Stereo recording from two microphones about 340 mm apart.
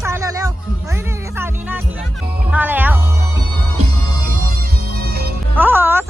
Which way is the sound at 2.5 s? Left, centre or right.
Centre.